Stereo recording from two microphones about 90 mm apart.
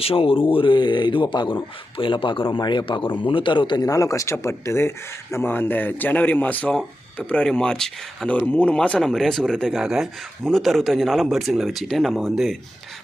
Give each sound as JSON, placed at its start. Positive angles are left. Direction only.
{"t": 0.0, "sound": "a man's voice", "side_deg": 90}
{"t": 3.8, "sound": "speech", "side_deg": 40}
{"t": 9.8, "sound": "speech", "side_deg": -5}